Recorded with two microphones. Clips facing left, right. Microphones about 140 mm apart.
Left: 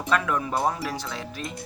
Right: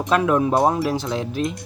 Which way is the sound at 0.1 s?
25° right (ahead or behind).